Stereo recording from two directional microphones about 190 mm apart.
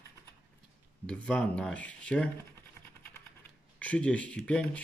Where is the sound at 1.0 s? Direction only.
5° left (ahead or behind).